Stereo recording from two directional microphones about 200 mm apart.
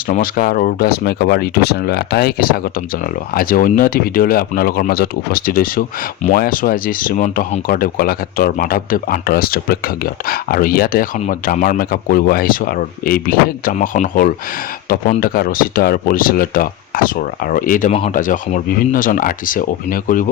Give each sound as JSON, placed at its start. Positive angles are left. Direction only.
{"t": 0.1, "sound": "speech", "side_deg": 45}